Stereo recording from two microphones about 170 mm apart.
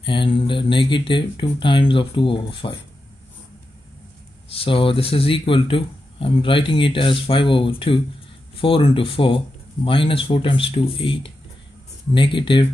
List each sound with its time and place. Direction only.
0.0 s speech: 30° left (ahead or behind)
4.5 s speech: 30° left (ahead or behind)